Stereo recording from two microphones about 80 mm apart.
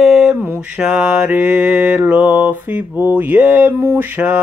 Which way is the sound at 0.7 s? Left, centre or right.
Centre.